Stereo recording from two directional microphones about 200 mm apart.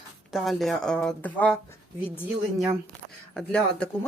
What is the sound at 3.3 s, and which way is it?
Speech, 5° left (ahead or behind).